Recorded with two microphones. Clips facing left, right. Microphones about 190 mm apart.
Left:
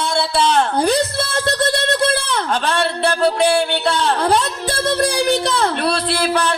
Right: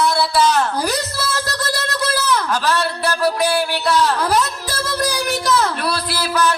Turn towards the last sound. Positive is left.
turn(degrees=30)  # may be behind; listen again after turning